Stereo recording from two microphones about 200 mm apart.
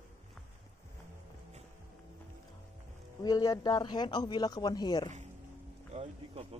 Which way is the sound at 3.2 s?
20° left (ahead or behind).